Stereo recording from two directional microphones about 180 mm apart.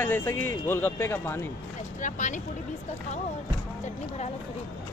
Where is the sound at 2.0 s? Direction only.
45° left (ahead or behind).